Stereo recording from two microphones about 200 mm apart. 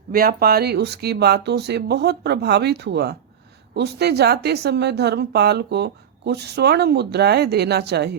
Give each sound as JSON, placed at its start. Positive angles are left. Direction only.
{"t": 0.1, "sound": "speech", "side_deg": -50}